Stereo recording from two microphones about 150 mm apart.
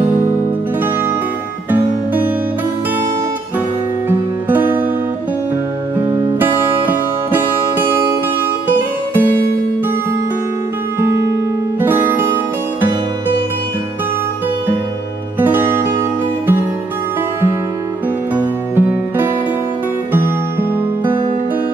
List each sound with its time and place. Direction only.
4.1 s music: 10° right (ahead or behind)
6.4 s music: 10° right (ahead or behind)
11.0 s music: 15° right (ahead or behind)
15.3 s music: 10° right (ahead or behind)
18.3 s music: 15° right (ahead or behind)